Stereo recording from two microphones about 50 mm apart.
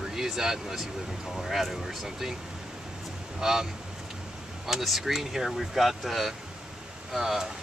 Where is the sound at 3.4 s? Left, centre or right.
Centre.